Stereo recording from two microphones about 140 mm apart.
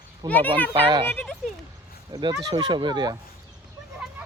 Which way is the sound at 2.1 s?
30° right (ahead or behind).